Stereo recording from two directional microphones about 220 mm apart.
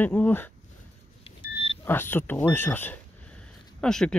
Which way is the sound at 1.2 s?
25° left (ahead or behind).